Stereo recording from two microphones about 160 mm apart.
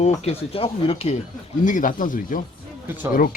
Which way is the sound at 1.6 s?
55° left (ahead or behind).